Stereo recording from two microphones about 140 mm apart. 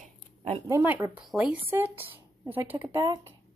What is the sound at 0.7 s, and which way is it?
Speech, 20° right (ahead or behind).